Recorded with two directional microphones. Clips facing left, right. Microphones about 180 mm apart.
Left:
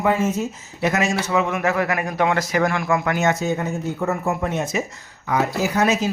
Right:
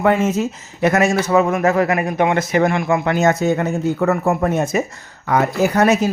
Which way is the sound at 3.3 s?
60° right (ahead or behind).